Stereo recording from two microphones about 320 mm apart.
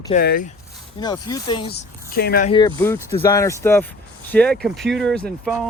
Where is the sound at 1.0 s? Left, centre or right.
Centre.